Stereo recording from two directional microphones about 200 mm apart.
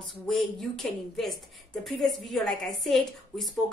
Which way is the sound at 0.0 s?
Centre (ahead or behind).